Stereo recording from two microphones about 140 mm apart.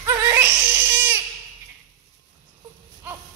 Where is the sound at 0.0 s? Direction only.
15° right (ahead or behind).